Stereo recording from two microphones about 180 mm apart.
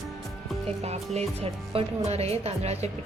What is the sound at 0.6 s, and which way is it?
Speech, 35° right (ahead or behind).